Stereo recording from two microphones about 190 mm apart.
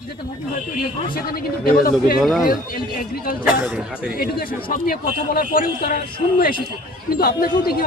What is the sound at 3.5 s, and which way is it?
Speech, 5° right (ahead or behind).